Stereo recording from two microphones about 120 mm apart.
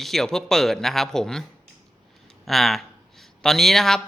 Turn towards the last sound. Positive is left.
turn(degrees=5)  # may be behind; listen again after turning